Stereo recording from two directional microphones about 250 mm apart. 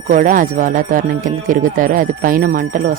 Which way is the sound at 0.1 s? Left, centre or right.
Right.